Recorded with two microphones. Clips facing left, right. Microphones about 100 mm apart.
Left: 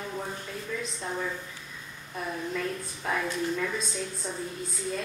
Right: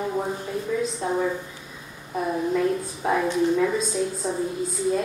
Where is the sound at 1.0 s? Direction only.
25° right (ahead or behind).